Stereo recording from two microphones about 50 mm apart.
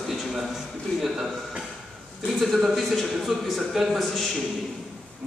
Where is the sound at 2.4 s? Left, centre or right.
Centre.